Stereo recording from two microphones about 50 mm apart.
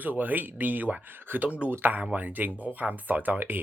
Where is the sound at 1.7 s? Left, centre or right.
Right.